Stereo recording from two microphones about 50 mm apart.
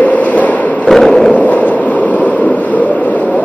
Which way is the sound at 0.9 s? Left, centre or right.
Centre.